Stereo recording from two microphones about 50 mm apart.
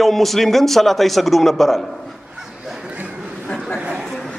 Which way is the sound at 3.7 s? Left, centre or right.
Right.